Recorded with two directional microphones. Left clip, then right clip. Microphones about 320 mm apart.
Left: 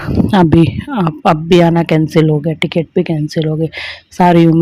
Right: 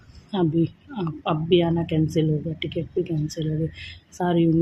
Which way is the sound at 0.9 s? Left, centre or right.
Left.